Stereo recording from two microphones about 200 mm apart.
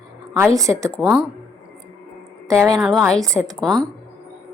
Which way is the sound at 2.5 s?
15° right (ahead or behind).